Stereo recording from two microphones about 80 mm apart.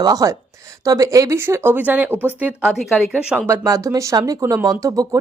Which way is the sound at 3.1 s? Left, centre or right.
Centre.